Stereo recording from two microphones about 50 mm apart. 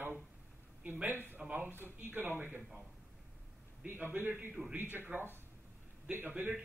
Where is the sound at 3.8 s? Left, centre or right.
Right.